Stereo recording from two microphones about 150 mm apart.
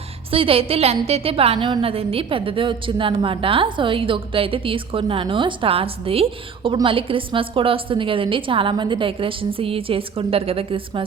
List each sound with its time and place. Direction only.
0.3 s a woman's voice: 40° right (ahead or behind)